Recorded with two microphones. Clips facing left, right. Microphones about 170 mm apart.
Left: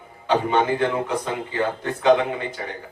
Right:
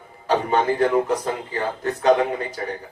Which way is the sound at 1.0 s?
40° right (ahead or behind).